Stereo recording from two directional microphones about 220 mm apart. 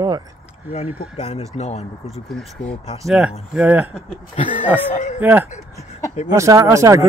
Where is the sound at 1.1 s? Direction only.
30° left (ahead or behind).